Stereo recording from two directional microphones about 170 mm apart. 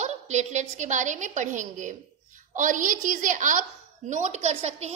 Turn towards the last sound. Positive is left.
turn(degrees=-40)  # may be behind; listen again after turning